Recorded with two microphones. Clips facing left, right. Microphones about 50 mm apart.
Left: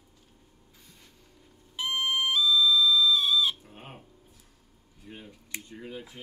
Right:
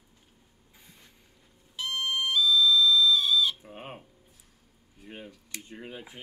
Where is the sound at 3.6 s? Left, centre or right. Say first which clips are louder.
Right 4 dB; centre.